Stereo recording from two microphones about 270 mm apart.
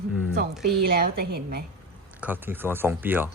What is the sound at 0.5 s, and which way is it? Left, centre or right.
Speech, centre.